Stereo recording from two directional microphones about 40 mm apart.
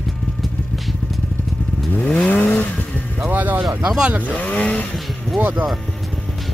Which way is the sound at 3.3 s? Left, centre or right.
Right.